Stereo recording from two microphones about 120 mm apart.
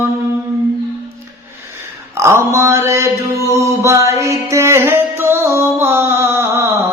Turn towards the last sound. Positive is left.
turn(degrees=-20)  # may be behind; listen again after turning